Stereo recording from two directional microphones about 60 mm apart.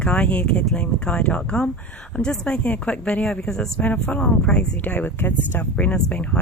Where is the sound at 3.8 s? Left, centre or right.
Left.